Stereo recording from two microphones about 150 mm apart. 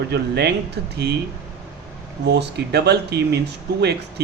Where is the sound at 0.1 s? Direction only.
90° right.